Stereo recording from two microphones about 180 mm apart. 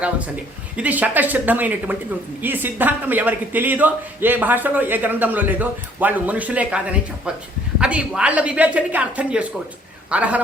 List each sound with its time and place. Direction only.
0.8 s a man's voice: 10° right (ahead or behind)